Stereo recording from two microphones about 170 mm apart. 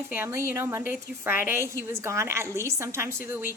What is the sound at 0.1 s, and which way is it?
A woman's voice, 15° right (ahead or behind).